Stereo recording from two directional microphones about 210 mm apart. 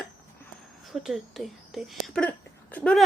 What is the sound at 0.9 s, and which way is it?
A woman's voice, centre (ahead or behind).